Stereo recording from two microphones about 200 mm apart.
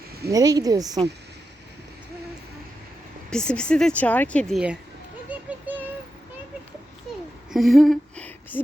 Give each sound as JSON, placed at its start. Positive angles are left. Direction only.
{"t": 0.3, "sound": "a woman's voice", "side_deg": -15}
{"t": 3.2, "sound": "speech", "side_deg": 5}
{"t": 7.5, "sound": "a sound", "side_deg": 0}